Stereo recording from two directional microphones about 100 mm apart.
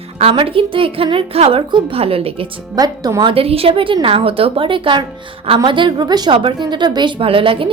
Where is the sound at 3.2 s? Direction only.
75° right (ahead or behind); by 7.3 s 50° right (ahead or behind).